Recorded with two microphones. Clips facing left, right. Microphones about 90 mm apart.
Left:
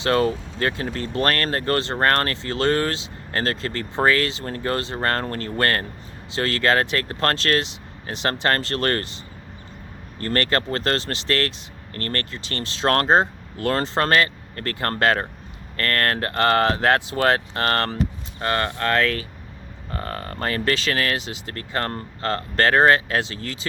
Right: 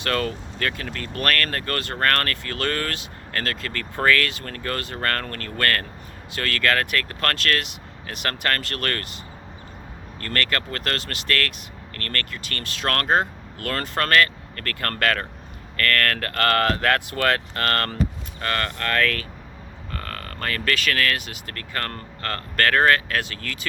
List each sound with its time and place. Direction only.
0.0 s speech: 25° left (ahead or behind)
10.2 s speech: 30° left (ahead or behind)